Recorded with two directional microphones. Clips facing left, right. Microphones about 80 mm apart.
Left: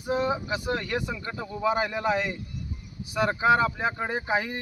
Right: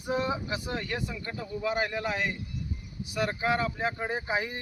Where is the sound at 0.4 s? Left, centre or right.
Left.